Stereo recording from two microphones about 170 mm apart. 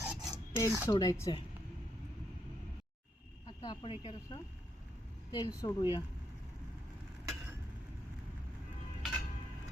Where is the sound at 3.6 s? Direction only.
30° left (ahead or behind).